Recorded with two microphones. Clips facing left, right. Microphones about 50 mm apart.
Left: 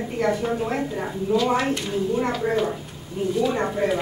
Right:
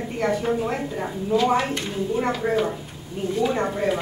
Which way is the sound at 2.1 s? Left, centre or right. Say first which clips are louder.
Right 2 dB; centre.